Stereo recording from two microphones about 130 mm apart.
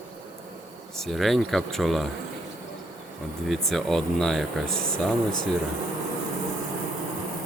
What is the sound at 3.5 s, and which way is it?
Speech, centre (ahead or behind).